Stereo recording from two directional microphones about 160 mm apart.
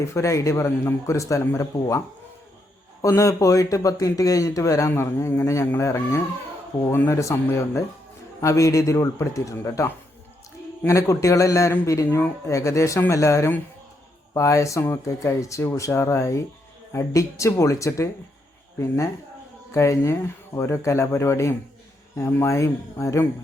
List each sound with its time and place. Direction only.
0.0 s speech: 20° left (ahead or behind)